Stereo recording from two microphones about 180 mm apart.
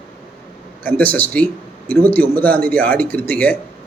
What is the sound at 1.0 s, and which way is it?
A man's voice, 10° left (ahead or behind).